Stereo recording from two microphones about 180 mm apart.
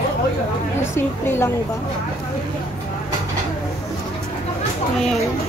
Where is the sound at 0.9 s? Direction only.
15° left (ahead or behind).